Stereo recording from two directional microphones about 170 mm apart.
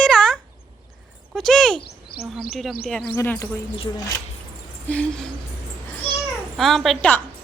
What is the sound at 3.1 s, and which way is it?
Speech, 15° left (ahead or behind).